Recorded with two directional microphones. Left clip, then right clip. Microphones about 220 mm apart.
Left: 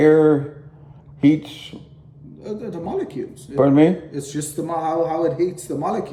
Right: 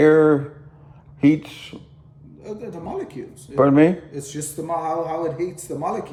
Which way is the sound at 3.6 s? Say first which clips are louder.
Left 1 dB; 20° right (ahead or behind).